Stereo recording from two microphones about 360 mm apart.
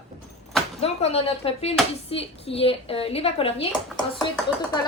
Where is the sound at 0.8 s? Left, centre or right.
Centre.